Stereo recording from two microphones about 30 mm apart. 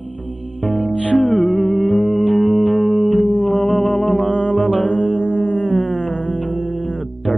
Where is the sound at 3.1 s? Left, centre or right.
Left.